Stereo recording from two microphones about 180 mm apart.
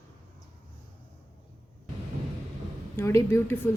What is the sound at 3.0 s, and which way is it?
Speech, 15° left (ahead or behind).